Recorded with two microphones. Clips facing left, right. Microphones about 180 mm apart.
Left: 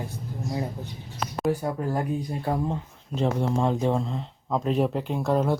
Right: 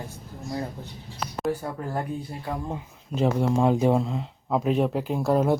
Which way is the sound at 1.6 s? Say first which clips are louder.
Left 3 dB; 15° left (ahead or behind).